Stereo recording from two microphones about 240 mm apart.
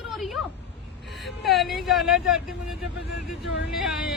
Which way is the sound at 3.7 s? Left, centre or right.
Centre.